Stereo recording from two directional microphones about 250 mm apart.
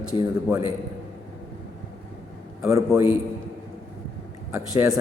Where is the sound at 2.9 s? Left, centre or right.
Centre.